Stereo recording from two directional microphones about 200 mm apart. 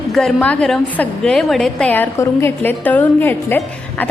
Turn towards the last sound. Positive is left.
turn(degrees=10)  # may be behind; listen again after turning